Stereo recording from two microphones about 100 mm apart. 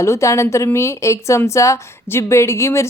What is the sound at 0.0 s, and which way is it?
Speech, 30° left (ahead or behind).